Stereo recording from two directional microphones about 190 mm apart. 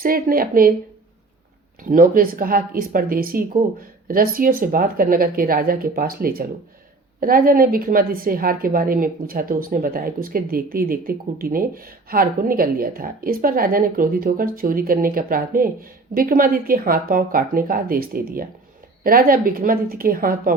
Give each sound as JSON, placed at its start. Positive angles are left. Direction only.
{"t": 0.0, "sound": "a woman's voice", "side_deg": -50}
{"t": 1.8, "sound": "a woman's voice", "side_deg": -45}